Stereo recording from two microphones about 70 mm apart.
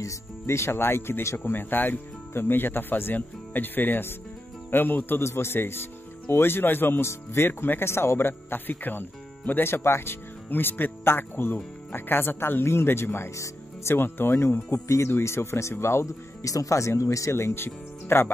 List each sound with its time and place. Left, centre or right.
0.0 s speech: left